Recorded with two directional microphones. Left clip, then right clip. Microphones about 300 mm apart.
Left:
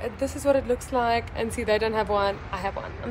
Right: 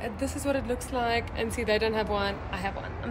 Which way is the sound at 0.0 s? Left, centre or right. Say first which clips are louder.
Left 5 dB; centre.